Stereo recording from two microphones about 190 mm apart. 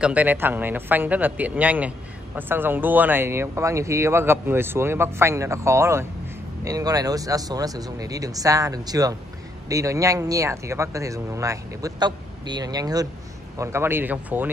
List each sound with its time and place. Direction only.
0.0 s a man's voice: 10° right (ahead or behind)